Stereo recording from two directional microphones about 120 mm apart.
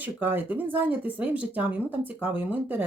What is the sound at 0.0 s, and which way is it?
Speech, 15° right (ahead or behind).